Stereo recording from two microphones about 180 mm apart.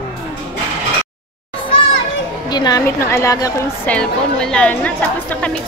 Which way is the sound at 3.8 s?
5° left (ahead or behind).